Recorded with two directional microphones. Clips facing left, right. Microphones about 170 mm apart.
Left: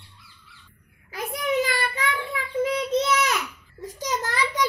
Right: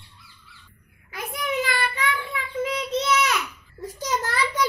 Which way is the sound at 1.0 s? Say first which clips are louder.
Left 3 dB; 40° left (ahead or behind).